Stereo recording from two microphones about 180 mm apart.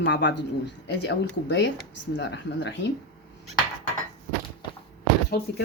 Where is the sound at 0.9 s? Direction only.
70° left (ahead or behind); by 2.7 s 85° left.